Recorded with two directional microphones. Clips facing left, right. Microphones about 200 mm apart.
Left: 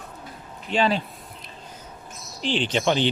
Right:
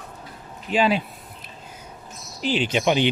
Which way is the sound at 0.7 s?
10° right (ahead or behind).